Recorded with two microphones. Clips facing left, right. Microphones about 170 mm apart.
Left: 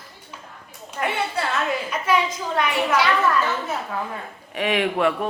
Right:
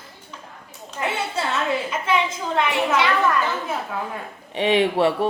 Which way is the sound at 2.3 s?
25° right (ahead or behind).